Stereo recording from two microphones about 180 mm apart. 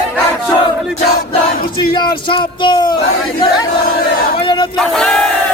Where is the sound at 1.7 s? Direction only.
25° left (ahead or behind).